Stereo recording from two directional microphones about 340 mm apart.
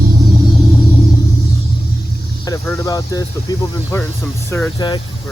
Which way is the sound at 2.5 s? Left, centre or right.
Centre.